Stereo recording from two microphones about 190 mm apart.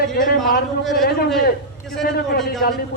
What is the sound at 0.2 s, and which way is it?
Speech, 50° left (ahead or behind).